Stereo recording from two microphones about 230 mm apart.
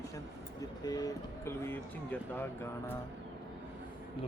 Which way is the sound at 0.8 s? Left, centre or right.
Centre.